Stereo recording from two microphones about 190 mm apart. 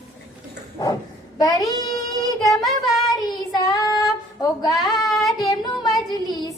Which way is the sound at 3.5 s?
20° left (ahead or behind).